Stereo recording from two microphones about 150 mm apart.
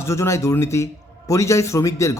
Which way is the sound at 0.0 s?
20° left (ahead or behind).